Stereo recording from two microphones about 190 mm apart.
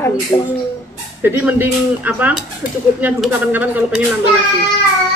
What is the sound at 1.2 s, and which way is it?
Speech, 10° right (ahead or behind).